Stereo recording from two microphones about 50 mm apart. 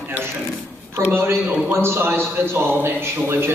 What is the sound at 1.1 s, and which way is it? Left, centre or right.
A man's voice, right.